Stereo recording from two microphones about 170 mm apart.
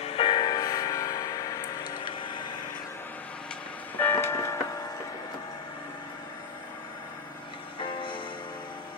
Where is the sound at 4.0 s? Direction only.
15° left (ahead or behind).